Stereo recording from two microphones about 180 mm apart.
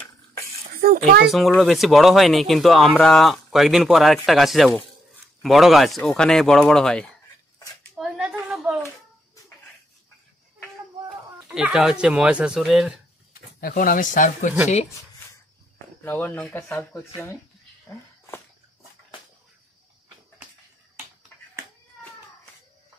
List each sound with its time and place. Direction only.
0.7 s a child's voice: 55° right (ahead or behind)
1.2 s speech: centre (ahead or behind)
8.0 s a sound: 10° right (ahead or behind)
11.4 s speech: 5° right (ahead or behind)
13.3 s speech: 55° left (ahead or behind)
16.0 s speech: 10° left (ahead or behind)
17.8 s a sound: 15° left (ahead or behind)